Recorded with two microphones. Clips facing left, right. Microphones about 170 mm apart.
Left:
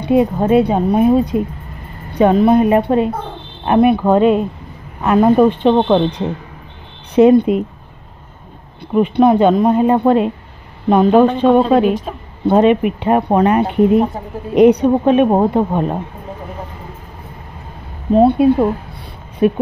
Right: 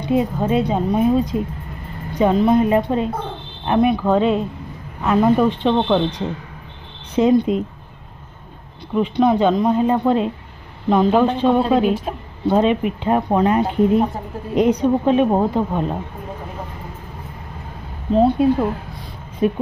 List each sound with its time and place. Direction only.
0.0 s speech: 60° left (ahead or behind)
8.9 s speech: 55° left (ahead or behind)
11.9 s a woman's voice: 10° right (ahead or behind)
12.4 s speech: 60° left (ahead or behind)
18.1 s speech: 60° left (ahead or behind)